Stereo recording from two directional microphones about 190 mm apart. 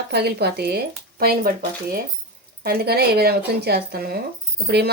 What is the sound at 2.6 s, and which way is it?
Speech, 55° right (ahead or behind).